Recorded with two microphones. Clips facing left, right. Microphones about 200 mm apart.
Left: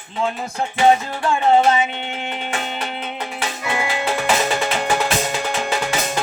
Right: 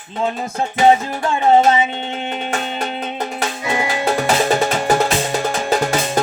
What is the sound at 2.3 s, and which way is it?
Music, 35° right (ahead or behind).